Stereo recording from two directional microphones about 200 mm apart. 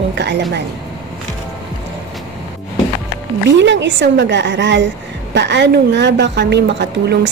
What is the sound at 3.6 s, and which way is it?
Speech, 65° right (ahead or behind).